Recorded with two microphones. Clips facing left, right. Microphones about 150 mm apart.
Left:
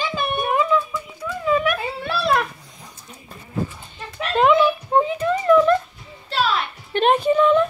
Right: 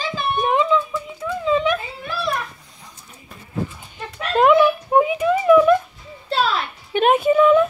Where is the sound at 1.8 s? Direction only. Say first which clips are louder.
Left 3 dB; 70° left (ahead or behind).